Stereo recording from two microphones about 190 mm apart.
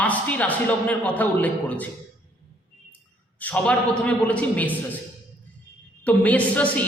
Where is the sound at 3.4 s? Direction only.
5° left (ahead or behind).